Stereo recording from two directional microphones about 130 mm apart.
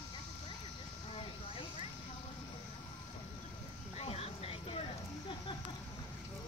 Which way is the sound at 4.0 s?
50° left (ahead or behind).